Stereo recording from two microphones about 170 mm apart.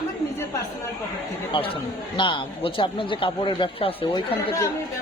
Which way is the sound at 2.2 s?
30° left (ahead or behind).